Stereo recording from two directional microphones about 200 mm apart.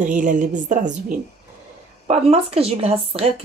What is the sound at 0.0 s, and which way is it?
Speech, 40° right (ahead or behind).